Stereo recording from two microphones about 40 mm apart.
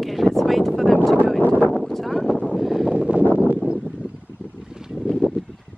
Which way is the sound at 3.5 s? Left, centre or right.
Right.